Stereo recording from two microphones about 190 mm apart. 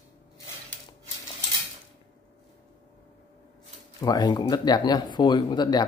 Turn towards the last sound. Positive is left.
turn(degrees=20)  # may be behind; listen again after turning